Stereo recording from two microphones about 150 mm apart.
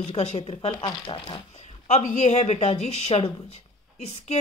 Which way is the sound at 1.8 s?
50° left (ahead or behind).